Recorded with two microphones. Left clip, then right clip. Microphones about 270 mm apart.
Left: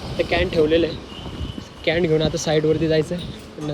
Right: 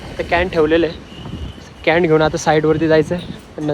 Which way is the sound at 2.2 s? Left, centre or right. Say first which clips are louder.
Right 6 dB; centre.